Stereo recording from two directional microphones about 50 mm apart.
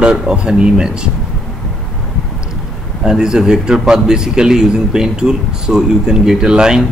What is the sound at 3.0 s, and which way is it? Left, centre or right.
A man's voice, centre.